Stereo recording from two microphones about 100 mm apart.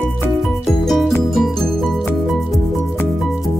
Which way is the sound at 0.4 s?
Centre (ahead or behind).